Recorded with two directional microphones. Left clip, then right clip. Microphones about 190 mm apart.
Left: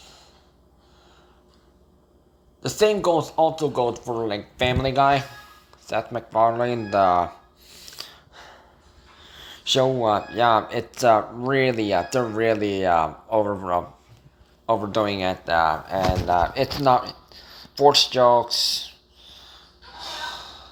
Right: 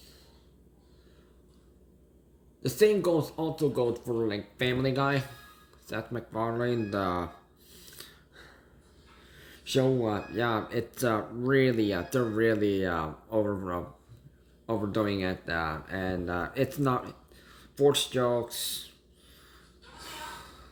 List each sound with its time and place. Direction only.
2.6 s speech: 15° right (ahead or behind)
7.7 s gasp: 15° right (ahead or behind)
9.2 s a sound: 10° right (ahead or behind)
10.0 s speech: 10° right (ahead or behind)
18.2 s speech: 50° left (ahead or behind)
19.3 s gasp: 15° right (ahead or behind)